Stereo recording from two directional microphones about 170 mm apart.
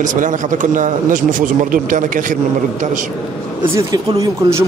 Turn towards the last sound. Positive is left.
turn(degrees=-15)  # may be behind; listen again after turning